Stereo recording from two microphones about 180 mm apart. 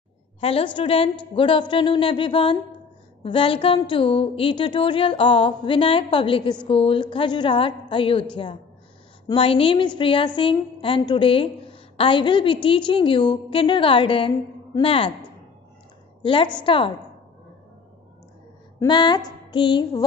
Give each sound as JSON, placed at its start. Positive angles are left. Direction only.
{"t": 0.4, "sound": "a woman's voice", "side_deg": 30}
{"t": 16.2, "sound": "a woman's voice", "side_deg": 30}
{"t": 18.9, "sound": "a woman's voice", "side_deg": 25}